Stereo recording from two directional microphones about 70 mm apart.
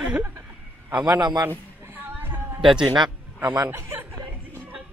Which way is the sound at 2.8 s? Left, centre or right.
Right.